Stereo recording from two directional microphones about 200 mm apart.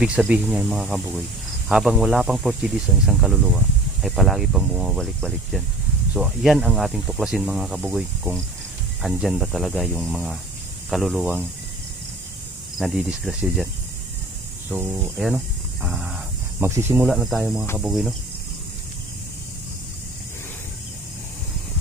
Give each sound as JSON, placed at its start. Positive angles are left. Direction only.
{"t": 0.0, "sound": "speech", "side_deg": -5}
{"t": 12.7, "sound": "speech", "side_deg": 0}
{"t": 14.7, "sound": "speech", "side_deg": -10}